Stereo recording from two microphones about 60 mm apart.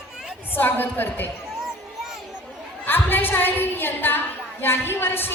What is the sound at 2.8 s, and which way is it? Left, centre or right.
A woman's voice, left.